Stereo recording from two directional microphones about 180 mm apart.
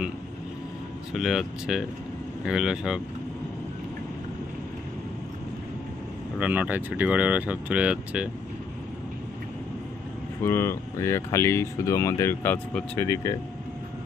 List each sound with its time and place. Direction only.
1.1 s speech: centre (ahead or behind)
6.4 s speech: 10° right (ahead or behind)
10.4 s speech: 15° left (ahead or behind)